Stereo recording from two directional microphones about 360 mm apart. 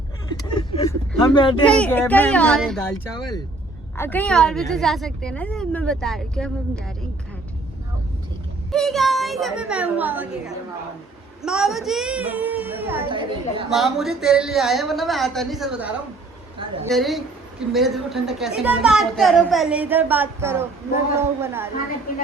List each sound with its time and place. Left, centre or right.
0.4 s vehicle: centre
1.6 s a woman's voice: centre
3.9 s a woman's voice: centre
8.7 s a woman's voice: centre
13.7 s a woman's voice: centre